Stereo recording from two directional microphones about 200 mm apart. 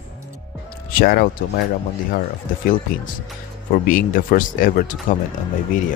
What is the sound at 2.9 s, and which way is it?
Speech, 45° left (ahead or behind).